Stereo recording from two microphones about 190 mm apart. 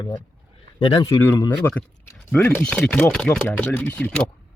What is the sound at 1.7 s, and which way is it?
Speech, 10° left (ahead or behind).